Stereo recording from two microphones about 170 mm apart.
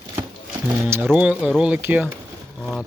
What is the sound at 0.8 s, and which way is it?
Speech, 10° right (ahead or behind).